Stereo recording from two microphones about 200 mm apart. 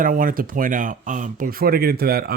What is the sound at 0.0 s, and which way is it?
Speech, 45° right (ahead or behind).